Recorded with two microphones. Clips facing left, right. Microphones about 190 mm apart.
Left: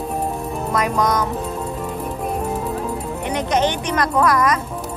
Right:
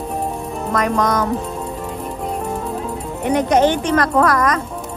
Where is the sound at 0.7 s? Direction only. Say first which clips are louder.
Right 2 dB; 10° left (ahead or behind).